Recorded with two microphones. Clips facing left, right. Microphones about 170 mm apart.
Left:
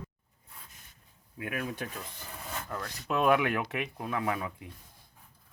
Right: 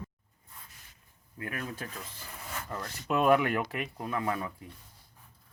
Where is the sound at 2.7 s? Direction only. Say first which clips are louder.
Right 2 dB; 10° right (ahead or behind).